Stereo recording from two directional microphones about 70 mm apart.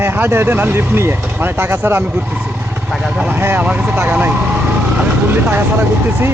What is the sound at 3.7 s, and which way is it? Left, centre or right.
Speech, centre.